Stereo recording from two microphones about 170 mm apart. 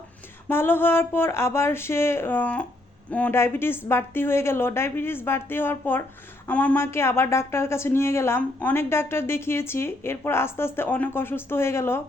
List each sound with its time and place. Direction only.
0.4 s a woman's voice: 10° left (ahead or behind)